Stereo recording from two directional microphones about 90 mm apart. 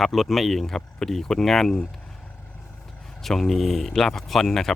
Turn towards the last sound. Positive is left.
turn(degrees=5)  # may be behind; listen again after turning